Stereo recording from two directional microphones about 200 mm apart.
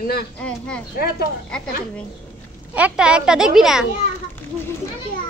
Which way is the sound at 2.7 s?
5° right (ahead or behind).